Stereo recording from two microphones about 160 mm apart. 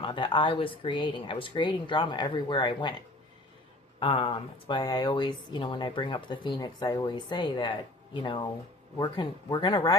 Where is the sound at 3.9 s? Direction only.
35° left (ahead or behind).